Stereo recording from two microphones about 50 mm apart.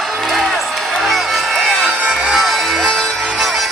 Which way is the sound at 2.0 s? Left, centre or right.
Centre.